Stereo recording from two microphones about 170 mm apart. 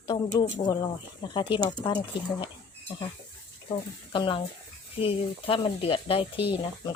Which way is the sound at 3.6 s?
30° left (ahead or behind).